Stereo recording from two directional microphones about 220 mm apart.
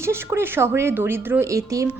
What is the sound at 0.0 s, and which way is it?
Speech, 10° right (ahead or behind).